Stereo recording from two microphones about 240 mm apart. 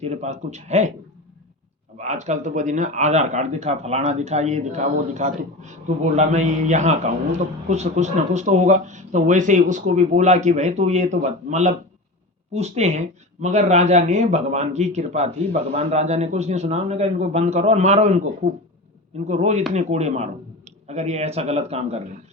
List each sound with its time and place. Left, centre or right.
0.0 s speech: right
2.0 s speech: right